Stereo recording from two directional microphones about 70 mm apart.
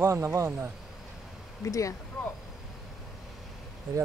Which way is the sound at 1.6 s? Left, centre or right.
Left.